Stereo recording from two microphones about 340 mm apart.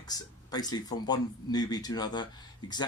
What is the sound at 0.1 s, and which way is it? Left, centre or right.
Speech, centre.